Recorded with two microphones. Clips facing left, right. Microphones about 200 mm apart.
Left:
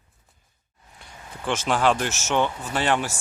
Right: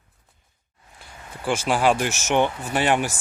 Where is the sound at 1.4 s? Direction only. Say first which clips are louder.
Right 2 dB; 10° right (ahead or behind).